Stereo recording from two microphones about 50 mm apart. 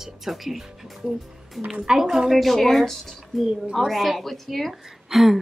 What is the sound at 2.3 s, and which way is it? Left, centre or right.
A woman's voice, centre.